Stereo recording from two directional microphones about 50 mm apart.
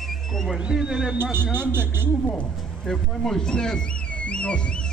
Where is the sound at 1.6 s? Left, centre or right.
Right.